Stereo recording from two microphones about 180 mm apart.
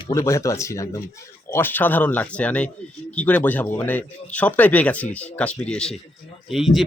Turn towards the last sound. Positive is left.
turn(degrees=0)  # may be behind; listen again after turning